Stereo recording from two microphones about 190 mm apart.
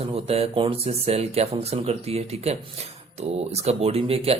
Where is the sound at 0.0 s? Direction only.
30° right (ahead or behind).